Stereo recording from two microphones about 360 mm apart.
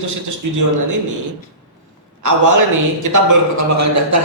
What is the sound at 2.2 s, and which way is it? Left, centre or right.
A man's voice, right.